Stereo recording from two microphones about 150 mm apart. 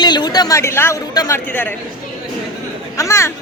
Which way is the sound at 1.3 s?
15° left (ahead or behind).